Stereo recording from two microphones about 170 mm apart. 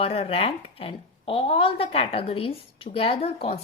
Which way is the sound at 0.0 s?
35° left (ahead or behind).